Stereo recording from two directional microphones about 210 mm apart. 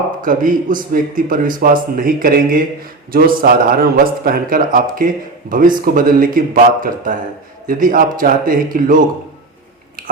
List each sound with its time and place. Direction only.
0.2 s a man's voice: 40° right (ahead or behind)